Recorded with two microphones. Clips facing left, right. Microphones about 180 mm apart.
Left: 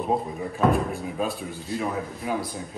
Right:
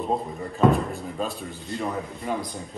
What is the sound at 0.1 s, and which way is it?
Speech, 5° left (ahead or behind).